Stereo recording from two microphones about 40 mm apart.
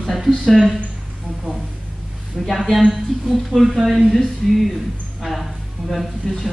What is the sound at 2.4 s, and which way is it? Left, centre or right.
A woman's voice, centre.